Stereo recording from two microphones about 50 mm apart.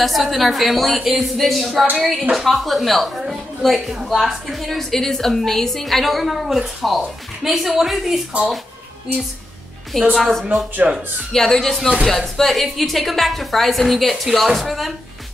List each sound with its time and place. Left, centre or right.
0.0 s a woman's voice: centre
9.9 s speech: centre
10.8 s speech: right
11.3 s a woman's voice: centre